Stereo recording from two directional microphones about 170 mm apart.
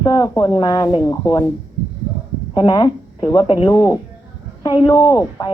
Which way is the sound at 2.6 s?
25° left (ahead or behind).